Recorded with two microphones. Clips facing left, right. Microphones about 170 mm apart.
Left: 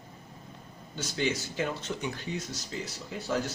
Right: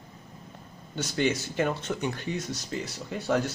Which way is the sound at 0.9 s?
55° right (ahead or behind).